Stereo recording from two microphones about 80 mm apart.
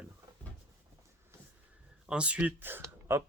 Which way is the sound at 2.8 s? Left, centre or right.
Right.